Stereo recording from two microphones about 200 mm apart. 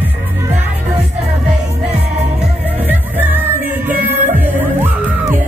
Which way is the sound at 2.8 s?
10° right (ahead or behind).